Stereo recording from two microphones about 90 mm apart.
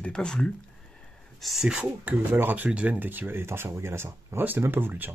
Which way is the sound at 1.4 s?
5° right (ahead or behind).